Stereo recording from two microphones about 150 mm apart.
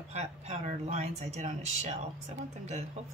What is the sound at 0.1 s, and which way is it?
Speech, 45° right (ahead or behind).